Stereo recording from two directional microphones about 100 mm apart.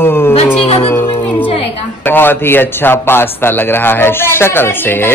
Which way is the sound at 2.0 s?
20° left (ahead or behind).